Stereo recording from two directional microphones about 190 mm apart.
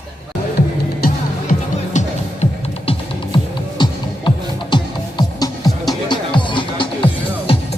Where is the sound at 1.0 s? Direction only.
45° left (ahead or behind).